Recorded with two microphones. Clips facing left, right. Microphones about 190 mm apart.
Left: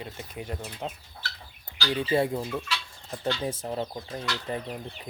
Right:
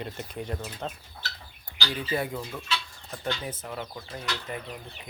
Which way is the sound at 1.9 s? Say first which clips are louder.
Left 5 dB; 25° left (ahead or behind).